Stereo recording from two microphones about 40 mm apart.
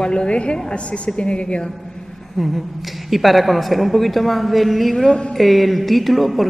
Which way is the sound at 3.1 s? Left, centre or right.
Centre.